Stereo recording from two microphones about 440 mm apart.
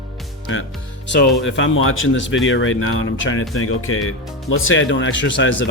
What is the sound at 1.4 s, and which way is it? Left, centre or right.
Speech, left.